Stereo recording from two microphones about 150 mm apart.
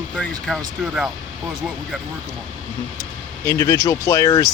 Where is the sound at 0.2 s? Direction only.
5° left (ahead or behind).